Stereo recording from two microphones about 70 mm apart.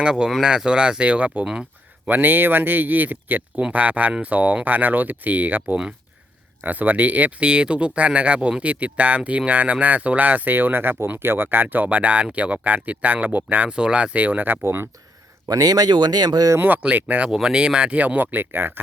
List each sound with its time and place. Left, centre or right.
0.0 s speech: centre; by 14.8 s right
15.4 s speech: right
16.6 s speech: right
17.2 s speech: centre; by 18.8 s right